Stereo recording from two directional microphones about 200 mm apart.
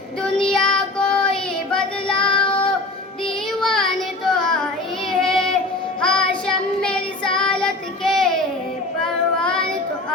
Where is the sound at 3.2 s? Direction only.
Centre (ahead or behind).